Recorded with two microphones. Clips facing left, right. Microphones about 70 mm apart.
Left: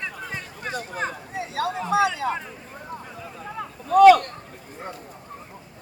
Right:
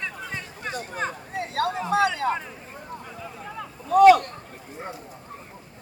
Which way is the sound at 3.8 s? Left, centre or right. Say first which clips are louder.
Left 2 dB; left.